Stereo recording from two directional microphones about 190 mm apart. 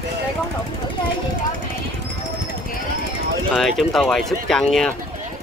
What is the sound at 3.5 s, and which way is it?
Speech, centre (ahead or behind).